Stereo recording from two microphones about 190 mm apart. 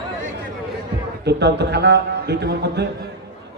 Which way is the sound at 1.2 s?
60° right (ahead or behind).